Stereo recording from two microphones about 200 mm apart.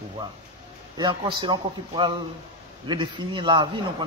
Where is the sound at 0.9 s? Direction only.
20° right (ahead or behind).